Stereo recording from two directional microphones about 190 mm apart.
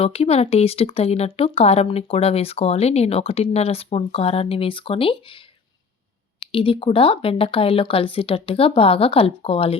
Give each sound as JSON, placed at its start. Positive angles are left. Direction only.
{"t": 0.0, "sound": "speech", "side_deg": 30}
{"t": 6.5, "sound": "speech", "side_deg": 30}